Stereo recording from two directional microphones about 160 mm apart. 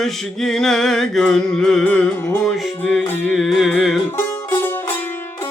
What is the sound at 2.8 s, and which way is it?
Music, 10° left (ahead or behind).